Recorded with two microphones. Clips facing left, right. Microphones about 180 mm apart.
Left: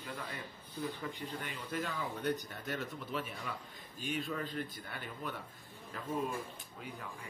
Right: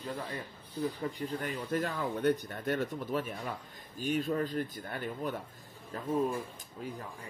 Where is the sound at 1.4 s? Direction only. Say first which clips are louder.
Right 7 dB; 50° right (ahead or behind).